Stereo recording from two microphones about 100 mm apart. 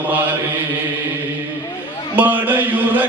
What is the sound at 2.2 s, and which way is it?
Mantra, 15° right (ahead or behind).